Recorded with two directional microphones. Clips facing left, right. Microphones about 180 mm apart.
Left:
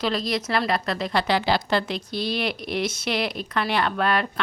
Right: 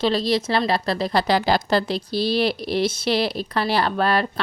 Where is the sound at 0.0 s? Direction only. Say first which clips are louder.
Right 5 dB; 30° right (ahead or behind).